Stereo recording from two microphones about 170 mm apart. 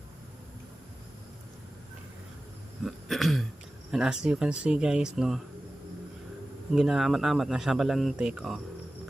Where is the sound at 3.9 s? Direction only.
5° right (ahead or behind).